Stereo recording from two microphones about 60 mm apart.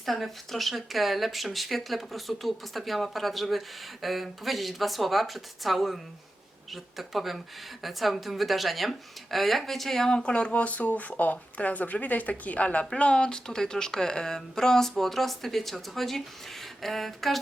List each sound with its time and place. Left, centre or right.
0.0 s speech: centre